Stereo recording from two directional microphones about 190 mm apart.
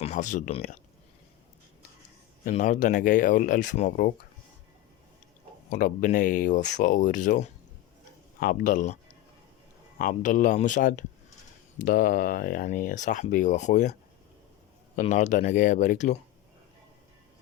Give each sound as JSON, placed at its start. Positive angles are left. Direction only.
{"t": 0.0, "sound": "speech", "side_deg": 40}
{"t": 2.4, "sound": "speech", "side_deg": 40}
{"t": 5.7, "sound": "speech", "side_deg": 45}
{"t": 10.0, "sound": "speech", "side_deg": 45}
{"t": 14.9, "sound": "speech", "side_deg": 40}